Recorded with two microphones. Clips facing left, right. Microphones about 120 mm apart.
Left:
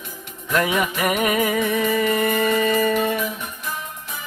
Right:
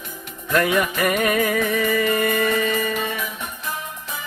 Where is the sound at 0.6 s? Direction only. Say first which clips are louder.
Right 1 dB; 15° left (ahead or behind).